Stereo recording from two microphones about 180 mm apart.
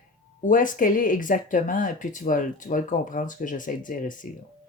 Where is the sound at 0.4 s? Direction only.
45° left (ahead or behind).